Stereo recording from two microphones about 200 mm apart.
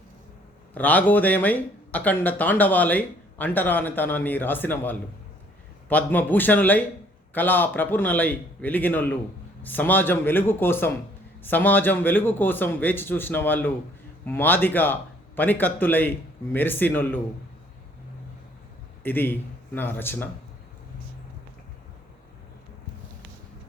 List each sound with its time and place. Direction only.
0.7 s speech: 10° left (ahead or behind)
19.0 s speech: 10° left (ahead or behind)